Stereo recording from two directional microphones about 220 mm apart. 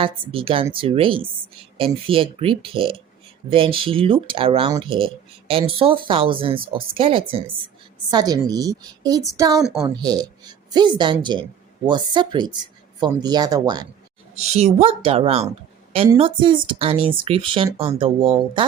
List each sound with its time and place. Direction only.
0.0 s a woman's voice: 25° right (ahead or behind)
14.3 s speech: 30° right (ahead or behind)